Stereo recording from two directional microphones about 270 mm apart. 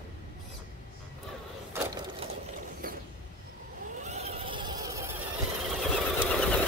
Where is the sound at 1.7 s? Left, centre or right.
Centre.